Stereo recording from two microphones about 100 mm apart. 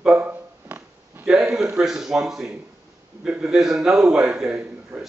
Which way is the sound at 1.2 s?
5° right (ahead or behind).